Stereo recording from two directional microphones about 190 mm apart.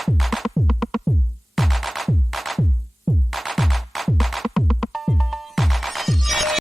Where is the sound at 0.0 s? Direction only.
Centre (ahead or behind).